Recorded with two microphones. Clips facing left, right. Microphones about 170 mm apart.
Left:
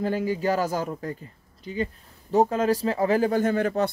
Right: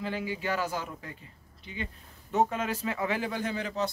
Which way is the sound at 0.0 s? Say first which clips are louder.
Left 8 dB; 45° left (ahead or behind).